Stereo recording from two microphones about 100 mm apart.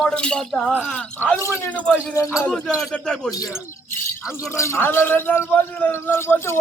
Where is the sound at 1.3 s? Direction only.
30° left (ahead or behind).